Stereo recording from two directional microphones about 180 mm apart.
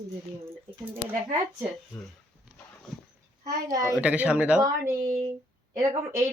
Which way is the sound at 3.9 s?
5° right (ahead or behind).